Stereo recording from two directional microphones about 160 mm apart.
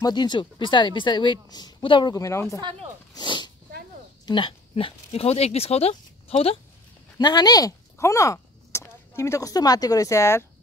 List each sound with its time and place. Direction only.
0.0 s speech: 25° left (ahead or behind)
7.2 s speech: 25° left (ahead or behind)